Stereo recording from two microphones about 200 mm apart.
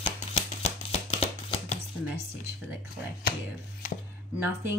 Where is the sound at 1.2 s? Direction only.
30° left (ahead or behind).